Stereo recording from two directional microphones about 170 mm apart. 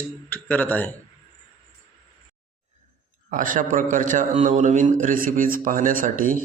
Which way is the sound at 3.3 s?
50° right (ahead or behind).